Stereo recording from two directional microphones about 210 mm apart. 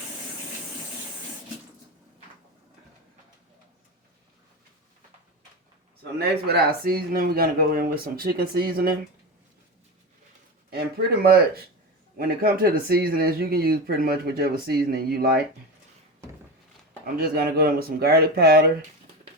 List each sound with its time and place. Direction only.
6.0 s speech: 50° right (ahead or behind)
10.7 s speech: 50° right (ahead or behind)
17.2 s speech: 45° right (ahead or behind)